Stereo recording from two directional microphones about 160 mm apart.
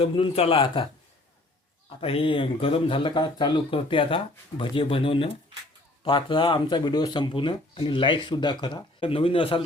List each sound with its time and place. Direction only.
0.0 s speech: 35° left (ahead or behind)
2.0 s speech: 35° left (ahead or behind)